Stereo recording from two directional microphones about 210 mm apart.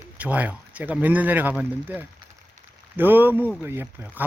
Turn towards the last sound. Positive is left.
turn(degrees=-10)  # may be behind; listen again after turning